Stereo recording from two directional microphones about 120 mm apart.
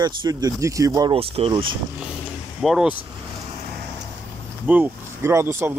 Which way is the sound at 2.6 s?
5° right (ahead or behind).